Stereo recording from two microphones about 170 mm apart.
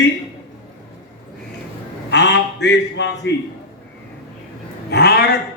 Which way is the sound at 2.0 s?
90° left.